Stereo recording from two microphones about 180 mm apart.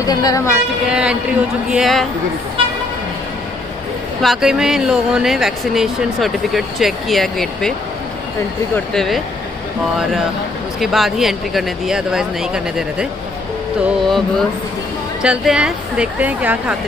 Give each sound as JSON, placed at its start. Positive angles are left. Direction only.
{"t": 0.0, "sound": "speech", "side_deg": 20}
{"t": 0.8, "sound": "speech", "side_deg": -5}
{"t": 4.2, "sound": "speech", "side_deg": 0}
{"t": 8.7, "sound": "speech", "side_deg": 0}
{"t": 10.8, "sound": "speech", "side_deg": 0}
{"t": 15.2, "sound": "speech", "side_deg": -5}